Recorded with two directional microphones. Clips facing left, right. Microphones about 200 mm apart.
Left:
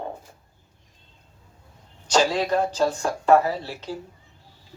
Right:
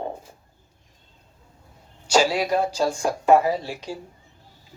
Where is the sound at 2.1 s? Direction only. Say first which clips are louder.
Right 1 dB; 10° right (ahead or behind).